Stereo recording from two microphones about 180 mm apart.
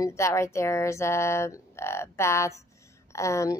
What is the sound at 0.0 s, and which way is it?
Speech, 15° left (ahead or behind).